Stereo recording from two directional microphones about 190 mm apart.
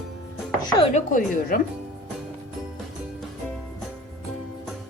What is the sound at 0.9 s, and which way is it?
Speech, 45° left (ahead or behind).